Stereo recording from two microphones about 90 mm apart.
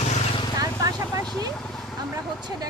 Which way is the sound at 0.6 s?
40° right (ahead or behind).